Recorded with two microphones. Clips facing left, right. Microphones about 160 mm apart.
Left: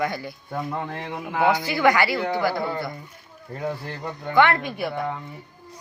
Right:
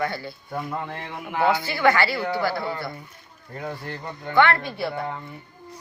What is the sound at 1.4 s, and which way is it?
A man's voice, 15° left (ahead or behind).